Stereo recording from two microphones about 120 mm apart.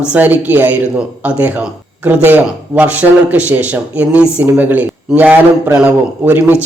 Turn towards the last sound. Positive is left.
turn(degrees=-15)  # may be behind; listen again after turning